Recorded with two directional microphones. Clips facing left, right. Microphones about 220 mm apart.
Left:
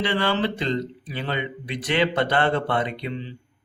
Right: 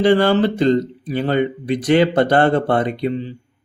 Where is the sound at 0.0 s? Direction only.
45° right (ahead or behind).